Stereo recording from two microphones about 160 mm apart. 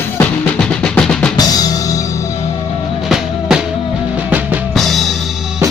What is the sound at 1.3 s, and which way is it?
Drum kit, 25° left (ahead or behind).